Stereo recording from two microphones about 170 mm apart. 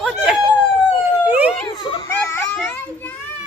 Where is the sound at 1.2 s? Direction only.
10° right (ahead or behind).